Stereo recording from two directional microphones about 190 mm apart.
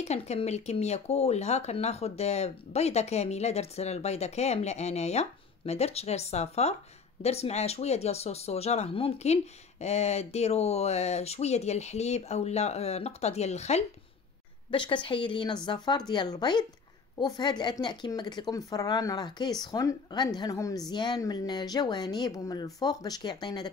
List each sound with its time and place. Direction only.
0.0 s speech: 35° left (ahead or behind)
14.9 s speech: 25° left (ahead or behind)